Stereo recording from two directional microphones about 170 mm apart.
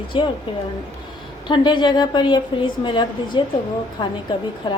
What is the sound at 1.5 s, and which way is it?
A woman's voice, 25° left (ahead or behind).